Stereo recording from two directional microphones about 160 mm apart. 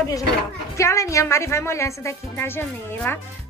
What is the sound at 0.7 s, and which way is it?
A woman's voice, 20° left (ahead or behind).